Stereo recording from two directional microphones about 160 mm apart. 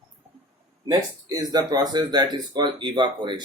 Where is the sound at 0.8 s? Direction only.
25° right (ahead or behind).